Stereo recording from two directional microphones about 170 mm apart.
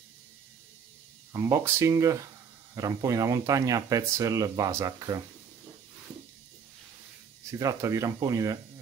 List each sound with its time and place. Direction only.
1.3 s speech: 15° right (ahead or behind)
7.4 s speech: 20° right (ahead or behind)